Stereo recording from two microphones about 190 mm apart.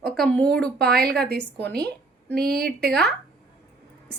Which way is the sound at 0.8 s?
55° right (ahead or behind).